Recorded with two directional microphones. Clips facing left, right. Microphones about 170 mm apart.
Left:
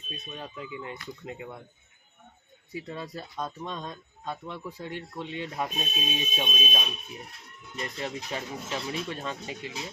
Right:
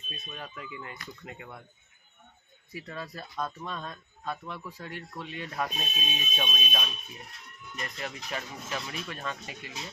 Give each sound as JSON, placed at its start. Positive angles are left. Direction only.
{"t": 0.3, "sound": "speech", "side_deg": 25}
{"t": 2.7, "sound": "speech", "side_deg": 25}